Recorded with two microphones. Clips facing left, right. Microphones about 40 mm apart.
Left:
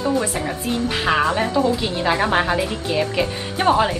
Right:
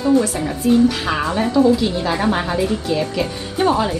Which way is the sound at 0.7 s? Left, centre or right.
Left.